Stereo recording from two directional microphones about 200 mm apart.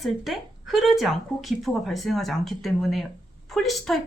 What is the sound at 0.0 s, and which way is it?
A woman's voice, centre (ahead or behind).